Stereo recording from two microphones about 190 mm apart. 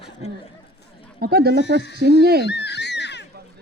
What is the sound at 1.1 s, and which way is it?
Speech, 55° right (ahead or behind).